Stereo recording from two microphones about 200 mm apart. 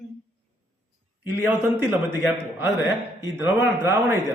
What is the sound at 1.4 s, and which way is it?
A man's voice, 10° right (ahead or behind).